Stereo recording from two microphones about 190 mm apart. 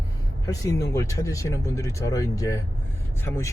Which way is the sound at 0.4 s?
20° left (ahead or behind).